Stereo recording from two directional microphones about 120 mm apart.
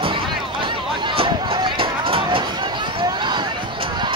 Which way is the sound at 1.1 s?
45° right (ahead or behind).